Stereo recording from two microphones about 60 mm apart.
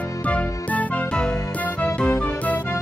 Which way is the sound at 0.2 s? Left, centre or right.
Left.